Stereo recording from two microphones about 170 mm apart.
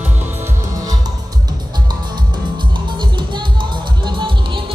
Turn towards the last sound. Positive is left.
turn(degrees=-30)  # may be behind; listen again after turning